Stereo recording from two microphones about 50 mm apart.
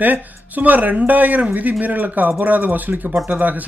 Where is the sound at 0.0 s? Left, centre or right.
Right.